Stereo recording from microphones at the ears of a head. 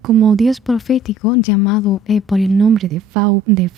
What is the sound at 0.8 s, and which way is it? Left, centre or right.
Speech, left.